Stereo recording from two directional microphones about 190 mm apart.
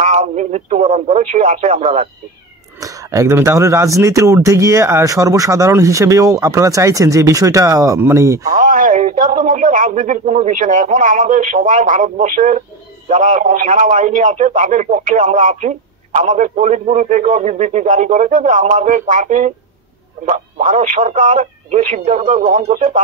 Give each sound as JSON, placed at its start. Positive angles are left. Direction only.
{"t": 0.0, "sound": "speech", "side_deg": -40}
{"t": 2.8, "sound": "speech", "side_deg": -15}
{"t": 8.5, "sound": "speech", "side_deg": -45}